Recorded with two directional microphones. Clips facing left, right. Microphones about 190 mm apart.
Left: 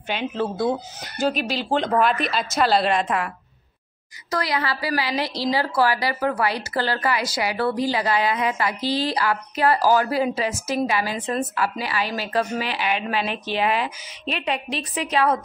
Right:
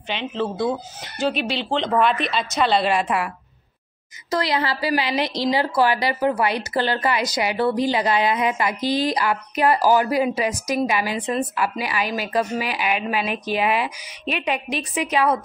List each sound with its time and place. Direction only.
0.1 s speech: 5° left (ahead or behind)
1.2 s speech: 45° left (ahead or behind)
1.6 s speech: 5° left (ahead or behind)
4.3 s a woman's voice: 25° right (ahead or behind)